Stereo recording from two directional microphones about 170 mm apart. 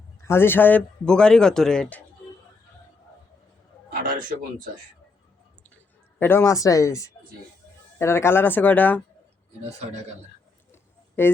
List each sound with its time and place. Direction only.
0.2 s a man's voice: 15° left (ahead or behind)
6.1 s speech: 15° left (ahead or behind)
11.2 s speech: 15° left (ahead or behind)